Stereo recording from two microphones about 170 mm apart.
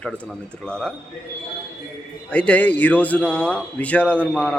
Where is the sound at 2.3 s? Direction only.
5° left (ahead or behind).